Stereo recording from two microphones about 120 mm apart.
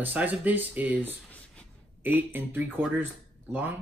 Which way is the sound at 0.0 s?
15° right (ahead or behind).